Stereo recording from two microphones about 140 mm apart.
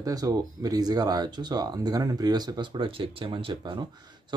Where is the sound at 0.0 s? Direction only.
25° right (ahead or behind).